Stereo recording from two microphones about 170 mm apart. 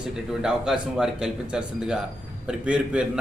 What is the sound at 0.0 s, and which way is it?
Speech, 5° right (ahead or behind).